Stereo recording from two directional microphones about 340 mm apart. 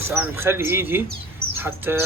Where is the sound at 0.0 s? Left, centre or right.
Centre.